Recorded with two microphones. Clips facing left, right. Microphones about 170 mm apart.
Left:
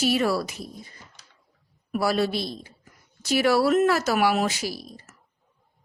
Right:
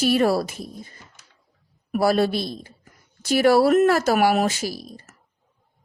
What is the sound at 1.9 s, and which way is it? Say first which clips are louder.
A woman's voice: right 4 dB; 50° right (ahead or behind).